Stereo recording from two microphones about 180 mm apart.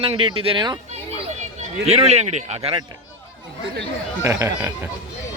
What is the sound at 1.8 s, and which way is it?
Speech, 35° right (ahead or behind).